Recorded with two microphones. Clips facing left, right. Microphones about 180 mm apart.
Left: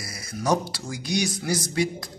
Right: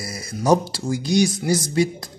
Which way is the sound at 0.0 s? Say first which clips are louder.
Right 5 dB; 25° right (ahead or behind).